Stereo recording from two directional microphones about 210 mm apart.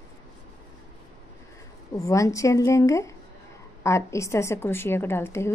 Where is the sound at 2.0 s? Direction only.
15° left (ahead or behind).